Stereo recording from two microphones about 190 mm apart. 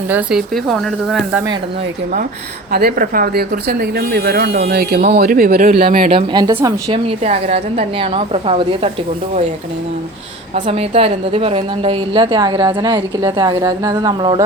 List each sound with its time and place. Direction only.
0.1 s speech: 5° right (ahead or behind)
2.7 s speech: 50° right (ahead or behind)
6.1 s a woman's voice: 30° right (ahead or behind)
6.6 s speech: 15° right (ahead or behind)
7.1 s a woman's voice: 35° right (ahead or behind)
10.5 s a woman's voice: 30° right (ahead or behind)